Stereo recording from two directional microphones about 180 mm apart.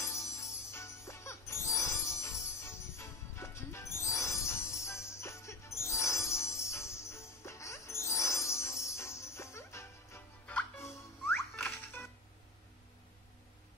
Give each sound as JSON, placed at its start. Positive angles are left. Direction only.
{"t": 0.0, "sound": "music", "side_deg": 15}